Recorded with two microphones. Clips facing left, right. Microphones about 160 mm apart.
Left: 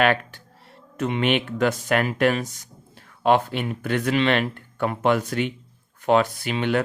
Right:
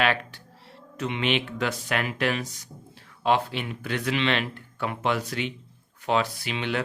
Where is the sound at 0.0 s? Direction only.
50° left (ahead or behind).